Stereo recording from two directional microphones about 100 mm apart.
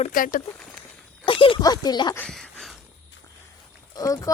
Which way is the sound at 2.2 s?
5° left (ahead or behind).